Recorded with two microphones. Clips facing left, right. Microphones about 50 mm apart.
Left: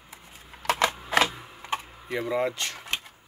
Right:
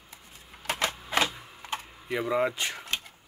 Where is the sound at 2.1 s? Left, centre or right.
Centre.